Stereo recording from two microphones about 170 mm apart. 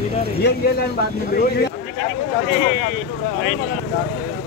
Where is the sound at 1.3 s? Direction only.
65° left (ahead or behind).